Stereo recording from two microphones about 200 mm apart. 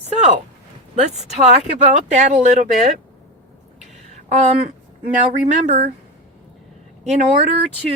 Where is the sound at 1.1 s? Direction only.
35° right (ahead or behind).